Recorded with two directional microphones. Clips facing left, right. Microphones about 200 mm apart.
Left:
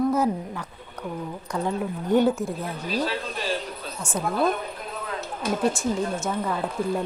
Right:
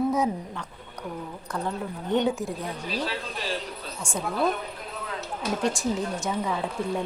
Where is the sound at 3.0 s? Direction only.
50° left (ahead or behind).